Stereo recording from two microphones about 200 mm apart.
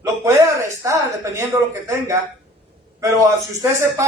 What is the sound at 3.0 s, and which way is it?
A man's voice, 15° right (ahead or behind).